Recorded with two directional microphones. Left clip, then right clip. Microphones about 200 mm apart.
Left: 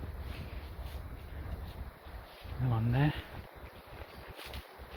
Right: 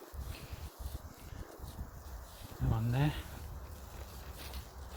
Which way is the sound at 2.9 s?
15° right (ahead or behind).